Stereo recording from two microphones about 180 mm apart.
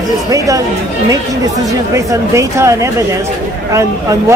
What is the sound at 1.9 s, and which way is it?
A man's voice, 15° right (ahead or behind).